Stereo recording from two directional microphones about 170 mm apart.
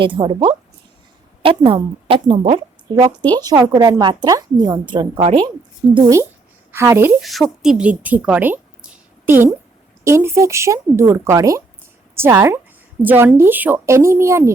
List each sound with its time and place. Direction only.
0.0 s a woman's voice: 30° right (ahead or behind)
6.7 s speech: 10° right (ahead or behind)
7.2 s speech: centre (ahead or behind); by 14.5 s 15° right (ahead or behind)